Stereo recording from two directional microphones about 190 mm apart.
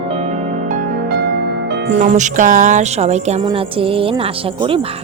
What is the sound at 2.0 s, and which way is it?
Speech, 40° right (ahead or behind).